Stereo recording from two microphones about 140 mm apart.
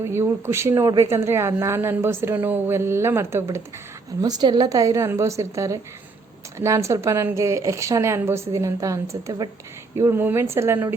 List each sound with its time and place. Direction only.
0.0 s a woman's voice: 15° right (ahead or behind)